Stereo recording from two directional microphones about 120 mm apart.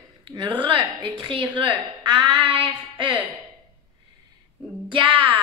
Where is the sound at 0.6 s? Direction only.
45° right (ahead or behind).